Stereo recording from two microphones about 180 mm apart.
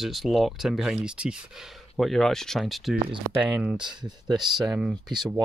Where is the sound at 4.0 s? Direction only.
Centre (ahead or behind).